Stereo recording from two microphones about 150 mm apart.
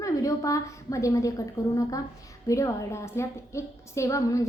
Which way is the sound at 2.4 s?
20° left (ahead or behind).